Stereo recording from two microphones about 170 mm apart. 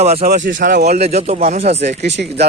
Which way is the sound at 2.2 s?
60° right (ahead or behind).